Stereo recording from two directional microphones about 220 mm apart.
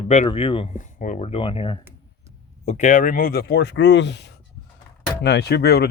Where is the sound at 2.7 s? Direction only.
35° left (ahead or behind).